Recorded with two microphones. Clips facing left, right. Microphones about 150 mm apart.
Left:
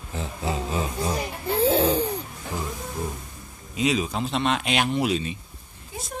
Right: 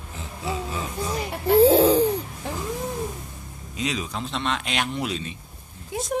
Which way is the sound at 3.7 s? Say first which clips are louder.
Left 5 dB; 10° left (ahead or behind).